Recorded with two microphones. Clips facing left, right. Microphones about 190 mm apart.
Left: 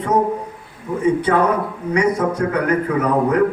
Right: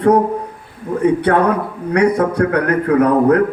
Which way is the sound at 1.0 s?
60° right (ahead or behind).